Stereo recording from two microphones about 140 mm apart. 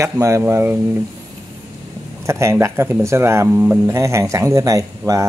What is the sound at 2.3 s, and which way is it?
Speech, 20° right (ahead or behind).